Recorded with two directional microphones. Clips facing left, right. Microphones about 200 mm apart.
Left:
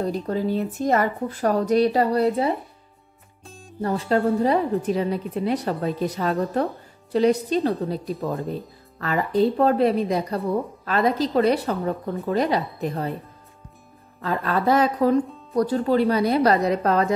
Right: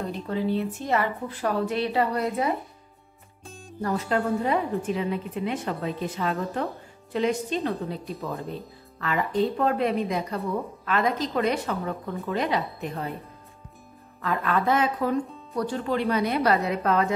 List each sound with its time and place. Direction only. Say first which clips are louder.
0.0 s a woman's voice: left 4 dB; 40° left (ahead or behind)
3.4 s music: right 1 dB; centre (ahead or behind)
3.8 s a woman's voice: left 4 dB; 30° left (ahead or behind)
14.2 s a woman's voice: left 2 dB; 35° left (ahead or behind)